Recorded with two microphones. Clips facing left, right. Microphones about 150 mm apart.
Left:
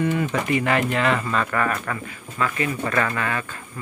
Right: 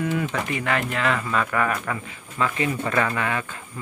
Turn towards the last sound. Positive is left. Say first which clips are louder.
# even
turn(degrees=-15)  # may be behind; listen again after turning